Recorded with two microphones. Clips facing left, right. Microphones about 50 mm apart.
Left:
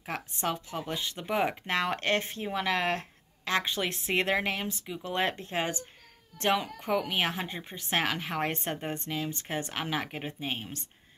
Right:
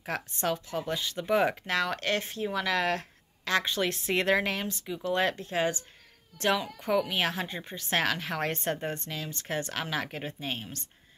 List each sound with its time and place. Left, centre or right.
0.0 s speech: centre